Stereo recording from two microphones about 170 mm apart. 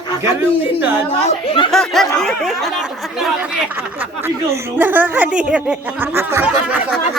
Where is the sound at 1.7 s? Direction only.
Centre (ahead or behind).